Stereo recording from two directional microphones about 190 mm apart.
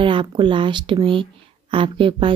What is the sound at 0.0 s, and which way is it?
Speech, 25° right (ahead or behind).